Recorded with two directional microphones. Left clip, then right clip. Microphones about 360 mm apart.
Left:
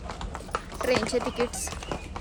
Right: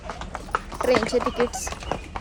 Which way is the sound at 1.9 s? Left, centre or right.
Centre.